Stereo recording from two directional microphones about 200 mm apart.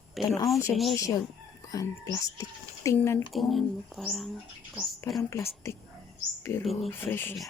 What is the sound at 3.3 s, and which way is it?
Speech, centre (ahead or behind).